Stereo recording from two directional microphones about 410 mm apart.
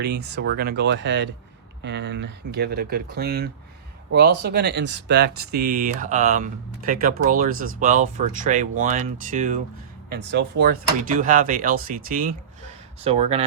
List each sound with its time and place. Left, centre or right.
0.0 s speech: right